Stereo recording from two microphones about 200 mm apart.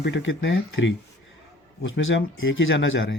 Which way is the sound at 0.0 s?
65° left (ahead or behind).